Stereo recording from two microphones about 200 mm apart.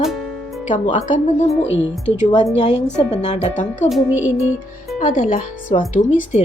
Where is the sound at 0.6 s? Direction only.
40° left (ahead or behind).